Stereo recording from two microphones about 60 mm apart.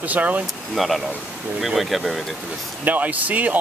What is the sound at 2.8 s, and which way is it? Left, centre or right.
Speech, right.